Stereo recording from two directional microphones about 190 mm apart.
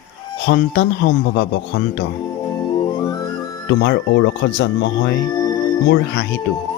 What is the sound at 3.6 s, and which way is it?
Speech, 70° left (ahead or behind).